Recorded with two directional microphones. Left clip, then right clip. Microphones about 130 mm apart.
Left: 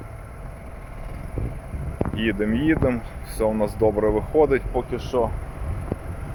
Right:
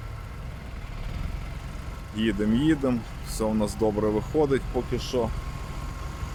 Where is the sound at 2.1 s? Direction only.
20° right (ahead or behind).